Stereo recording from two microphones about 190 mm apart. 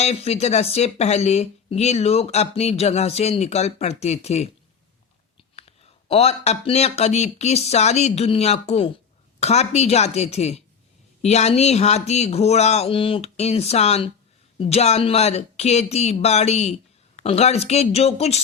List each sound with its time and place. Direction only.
0.0 s speech: 35° left (ahead or behind)
6.1 s speech: 35° left (ahead or behind)